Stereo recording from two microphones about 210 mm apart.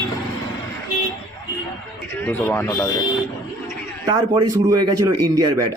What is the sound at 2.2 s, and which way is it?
Speech, 10° left (ahead or behind).